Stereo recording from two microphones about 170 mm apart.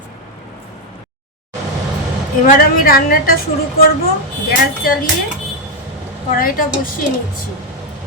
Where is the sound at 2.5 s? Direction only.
60° left (ahead or behind).